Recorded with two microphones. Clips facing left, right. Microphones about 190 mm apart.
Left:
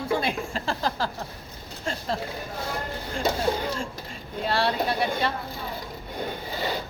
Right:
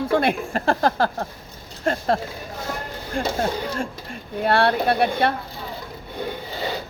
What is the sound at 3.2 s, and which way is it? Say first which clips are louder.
Speech: right 2 dB; 60° right (ahead or behind).